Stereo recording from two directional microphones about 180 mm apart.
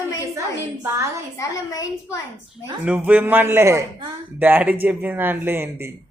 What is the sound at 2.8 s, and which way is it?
A man's voice, 5° right (ahead or behind).